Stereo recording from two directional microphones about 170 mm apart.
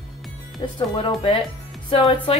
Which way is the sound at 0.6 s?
25° left (ahead or behind).